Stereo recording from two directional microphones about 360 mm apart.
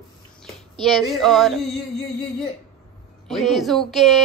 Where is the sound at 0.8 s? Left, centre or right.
Centre.